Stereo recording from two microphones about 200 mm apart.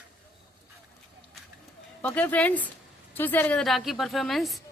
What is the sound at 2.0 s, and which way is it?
A woman's voice, 5° left (ahead or behind).